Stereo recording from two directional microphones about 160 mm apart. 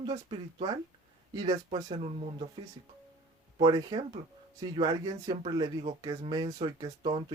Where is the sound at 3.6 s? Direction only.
30° right (ahead or behind).